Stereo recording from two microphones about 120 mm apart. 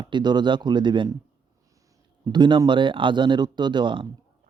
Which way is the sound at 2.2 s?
35° right (ahead or behind).